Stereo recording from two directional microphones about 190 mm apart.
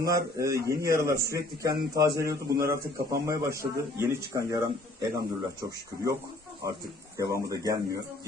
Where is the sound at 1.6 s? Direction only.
20° right (ahead or behind).